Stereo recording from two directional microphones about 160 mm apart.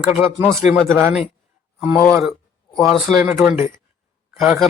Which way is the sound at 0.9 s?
15° right (ahead or behind).